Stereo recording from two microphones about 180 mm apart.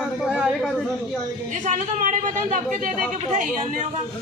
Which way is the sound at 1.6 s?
45° right (ahead or behind).